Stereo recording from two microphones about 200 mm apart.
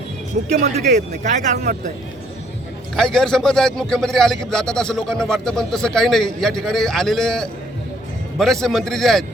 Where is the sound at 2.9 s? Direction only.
5° left (ahead or behind).